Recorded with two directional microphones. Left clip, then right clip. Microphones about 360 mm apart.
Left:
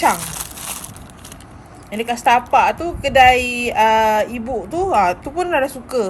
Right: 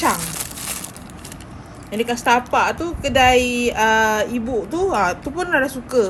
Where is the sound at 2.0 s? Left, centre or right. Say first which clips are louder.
Left 2 dB; centre.